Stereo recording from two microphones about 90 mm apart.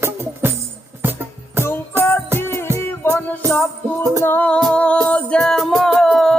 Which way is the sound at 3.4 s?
35° right (ahead or behind).